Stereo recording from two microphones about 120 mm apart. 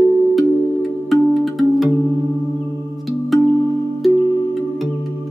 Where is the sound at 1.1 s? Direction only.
Centre (ahead or behind).